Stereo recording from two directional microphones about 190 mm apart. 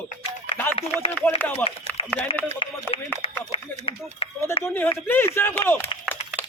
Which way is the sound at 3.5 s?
30° left (ahead or behind).